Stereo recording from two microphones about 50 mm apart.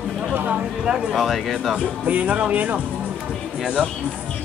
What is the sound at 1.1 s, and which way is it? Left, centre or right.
Speech, centre.